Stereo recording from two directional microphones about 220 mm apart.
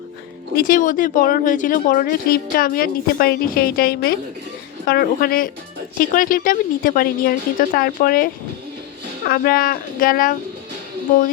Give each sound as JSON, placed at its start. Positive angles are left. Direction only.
{"t": 0.5, "sound": "speech", "side_deg": 40}